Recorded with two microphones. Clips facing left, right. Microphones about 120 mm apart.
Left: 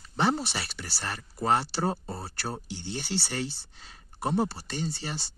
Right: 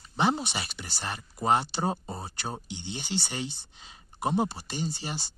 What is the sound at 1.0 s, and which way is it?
Speech, 15° right (ahead or behind).